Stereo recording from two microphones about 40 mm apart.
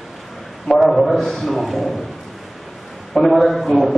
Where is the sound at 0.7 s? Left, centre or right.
Centre.